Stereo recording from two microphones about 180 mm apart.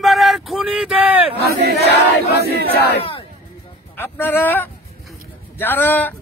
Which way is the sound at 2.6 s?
60° left (ahead or behind).